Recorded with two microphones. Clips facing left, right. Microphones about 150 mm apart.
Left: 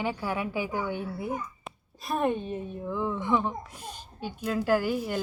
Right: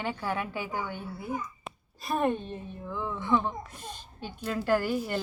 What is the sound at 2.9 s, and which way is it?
A woman's voice, 15° left (ahead or behind).